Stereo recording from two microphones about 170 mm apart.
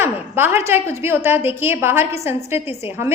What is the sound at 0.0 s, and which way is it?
A woman's voice, 15° right (ahead or behind).